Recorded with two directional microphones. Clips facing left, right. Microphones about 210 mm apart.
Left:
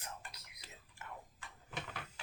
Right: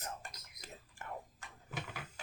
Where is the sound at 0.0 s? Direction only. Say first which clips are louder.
Right 4 dB; 45° right (ahead or behind).